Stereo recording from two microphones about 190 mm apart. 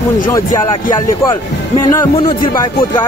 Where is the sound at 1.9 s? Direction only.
25° left (ahead or behind).